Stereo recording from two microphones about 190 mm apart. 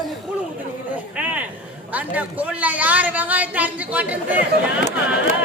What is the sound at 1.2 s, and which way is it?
A woman's voice, 5° right (ahead or behind).